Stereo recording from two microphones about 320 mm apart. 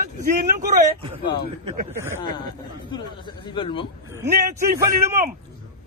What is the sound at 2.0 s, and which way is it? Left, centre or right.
Speech, centre.